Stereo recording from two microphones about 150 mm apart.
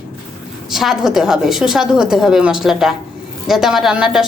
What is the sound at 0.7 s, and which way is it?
A woman's voice, centre (ahead or behind).